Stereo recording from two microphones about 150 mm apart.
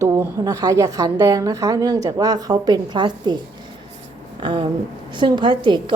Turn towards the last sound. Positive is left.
turn(degrees=-30)  # may be behind; listen again after turning